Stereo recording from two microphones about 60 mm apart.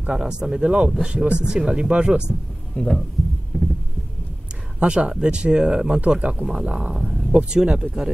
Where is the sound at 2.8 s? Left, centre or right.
Left.